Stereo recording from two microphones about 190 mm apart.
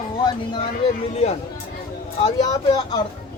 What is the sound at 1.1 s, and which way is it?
Speech, 35° left (ahead or behind).